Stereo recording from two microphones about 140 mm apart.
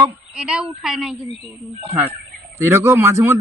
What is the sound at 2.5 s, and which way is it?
Speech, 20° right (ahead or behind).